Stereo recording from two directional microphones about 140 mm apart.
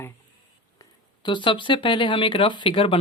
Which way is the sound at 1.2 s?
35° left (ahead or behind).